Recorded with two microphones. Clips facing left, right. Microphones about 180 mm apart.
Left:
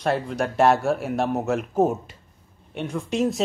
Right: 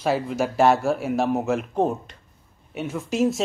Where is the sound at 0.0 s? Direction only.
5° right (ahead or behind).